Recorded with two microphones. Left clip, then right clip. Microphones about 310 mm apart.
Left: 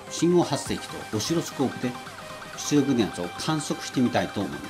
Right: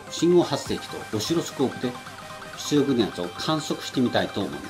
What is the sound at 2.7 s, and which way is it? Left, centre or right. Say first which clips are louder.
Speech: right 1 dB; centre.